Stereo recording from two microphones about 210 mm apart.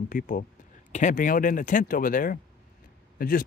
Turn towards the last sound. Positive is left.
turn(degrees=45)  # may be behind; listen again after turning